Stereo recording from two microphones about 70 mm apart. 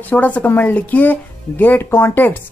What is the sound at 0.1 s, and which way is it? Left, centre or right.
Speech, left.